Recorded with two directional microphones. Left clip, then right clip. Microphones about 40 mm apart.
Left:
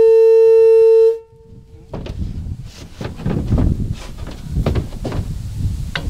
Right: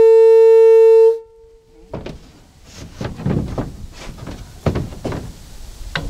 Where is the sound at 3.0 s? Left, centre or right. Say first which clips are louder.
Right 1 dB; left.